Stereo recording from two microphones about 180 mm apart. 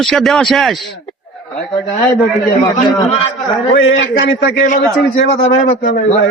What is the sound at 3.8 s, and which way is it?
Speech, 90° left.